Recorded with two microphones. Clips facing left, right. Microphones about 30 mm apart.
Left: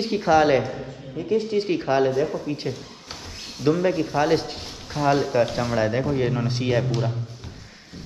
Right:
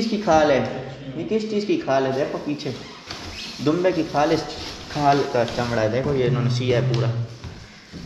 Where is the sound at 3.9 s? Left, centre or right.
Right.